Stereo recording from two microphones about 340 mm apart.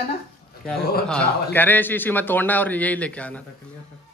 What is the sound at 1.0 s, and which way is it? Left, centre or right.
A man's voice, centre.